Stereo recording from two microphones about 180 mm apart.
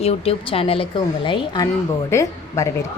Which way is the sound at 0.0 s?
35° left (ahead or behind).